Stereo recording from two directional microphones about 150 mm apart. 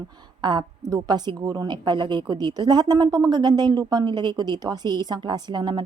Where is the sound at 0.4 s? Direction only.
30° right (ahead or behind).